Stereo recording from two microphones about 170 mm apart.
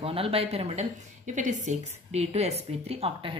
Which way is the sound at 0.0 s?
35° right (ahead or behind).